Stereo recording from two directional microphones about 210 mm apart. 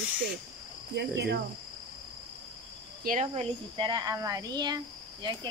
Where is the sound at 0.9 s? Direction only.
55° right (ahead or behind).